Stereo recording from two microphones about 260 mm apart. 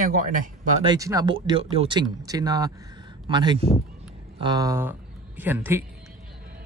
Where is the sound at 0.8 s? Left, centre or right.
Centre.